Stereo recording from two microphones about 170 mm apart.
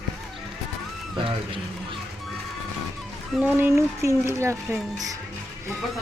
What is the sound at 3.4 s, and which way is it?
Speech, 10° right (ahead or behind).